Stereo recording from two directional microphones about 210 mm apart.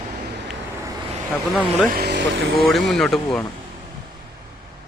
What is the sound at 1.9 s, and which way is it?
Speech, 50° right (ahead or behind).